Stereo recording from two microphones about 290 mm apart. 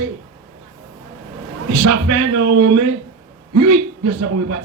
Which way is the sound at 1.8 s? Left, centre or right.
Right.